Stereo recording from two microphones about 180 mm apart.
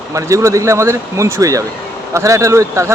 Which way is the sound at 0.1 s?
15° right (ahead or behind).